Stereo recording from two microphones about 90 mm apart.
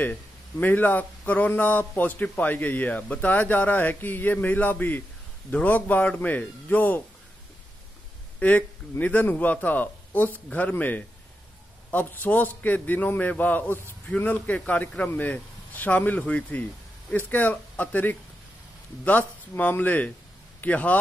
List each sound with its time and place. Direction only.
0.0 s a man's voice: 20° left (ahead or behind)
8.4 s a man's voice: 15° left (ahead or behind)